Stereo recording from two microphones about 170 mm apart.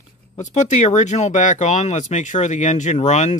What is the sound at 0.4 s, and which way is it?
Speech, 45° left (ahead or behind).